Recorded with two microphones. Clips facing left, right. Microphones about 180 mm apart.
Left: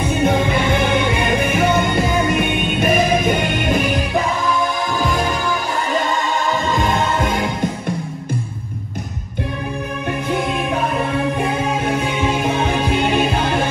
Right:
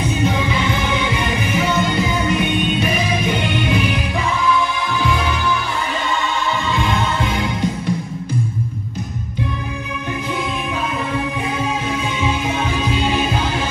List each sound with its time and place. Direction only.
0.1 s music: 55° left (ahead or behind)
5.0 s music: 40° left (ahead or behind)
6.7 s music: 45° left (ahead or behind)
11.9 s music: 55° left (ahead or behind)